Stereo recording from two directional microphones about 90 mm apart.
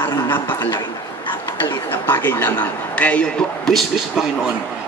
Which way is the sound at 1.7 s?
25° left (ahead or behind).